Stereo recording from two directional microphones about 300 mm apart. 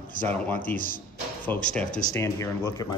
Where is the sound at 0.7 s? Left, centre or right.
Left.